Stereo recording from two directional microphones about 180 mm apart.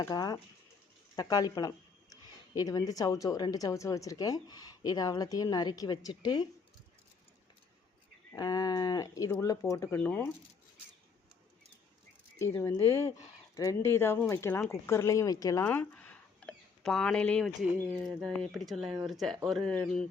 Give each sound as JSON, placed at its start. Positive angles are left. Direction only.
{"t": 0.0, "sound": "speech", "side_deg": 20}
{"t": 8.3, "sound": "speech", "side_deg": 20}
{"t": 12.4, "sound": "speech", "side_deg": 15}